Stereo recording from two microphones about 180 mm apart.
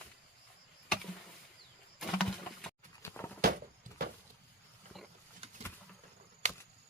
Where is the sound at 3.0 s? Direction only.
15° left (ahead or behind).